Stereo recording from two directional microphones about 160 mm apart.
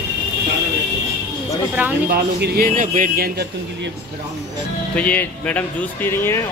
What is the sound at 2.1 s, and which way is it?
A man's voice, 70° right (ahead or behind).